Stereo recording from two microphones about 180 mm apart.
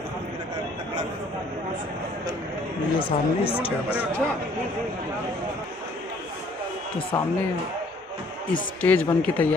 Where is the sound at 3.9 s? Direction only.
10° left (ahead or behind).